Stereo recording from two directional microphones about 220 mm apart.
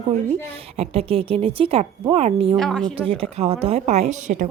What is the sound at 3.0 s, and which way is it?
A woman's voice, 25° right (ahead or behind).